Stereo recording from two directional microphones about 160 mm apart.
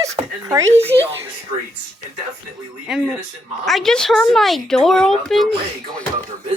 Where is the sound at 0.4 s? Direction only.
20° right (ahead or behind).